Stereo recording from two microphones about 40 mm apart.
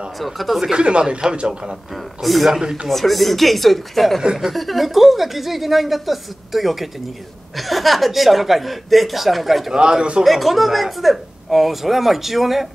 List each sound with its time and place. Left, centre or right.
0.2 s speech: centre
0.6 s speech: right
2.2 s speech: centre
9.7 s speech: centre
10.2 s speech: centre